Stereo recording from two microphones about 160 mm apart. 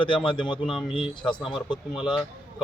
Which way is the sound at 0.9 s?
30° left (ahead or behind).